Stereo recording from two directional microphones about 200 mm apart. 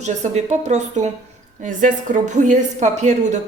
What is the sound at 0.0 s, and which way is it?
A woman's voice, 35° right (ahead or behind).